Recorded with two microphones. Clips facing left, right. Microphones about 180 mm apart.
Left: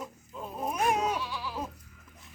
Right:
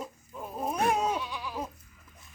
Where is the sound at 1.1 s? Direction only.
20° right (ahead or behind).